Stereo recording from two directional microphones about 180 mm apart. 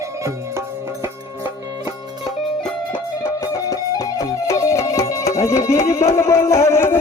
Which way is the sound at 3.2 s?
20° left (ahead or behind).